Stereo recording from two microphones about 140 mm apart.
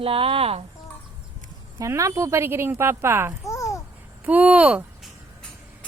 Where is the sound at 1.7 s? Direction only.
20° right (ahead or behind).